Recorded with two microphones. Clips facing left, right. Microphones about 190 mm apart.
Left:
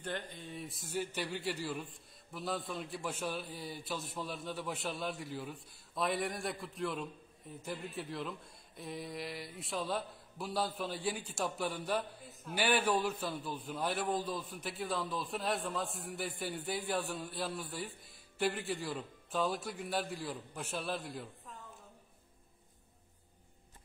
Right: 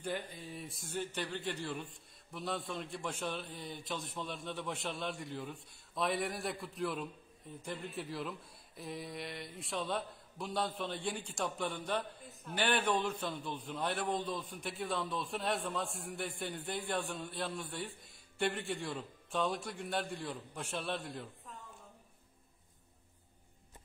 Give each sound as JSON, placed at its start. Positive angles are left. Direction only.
{"t": 0.0, "sound": "speech", "side_deg": -10}